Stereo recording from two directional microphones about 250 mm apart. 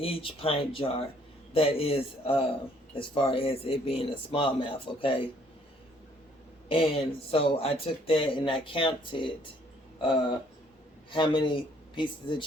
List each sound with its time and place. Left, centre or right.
0.0 s speech: left
6.7 s speech: left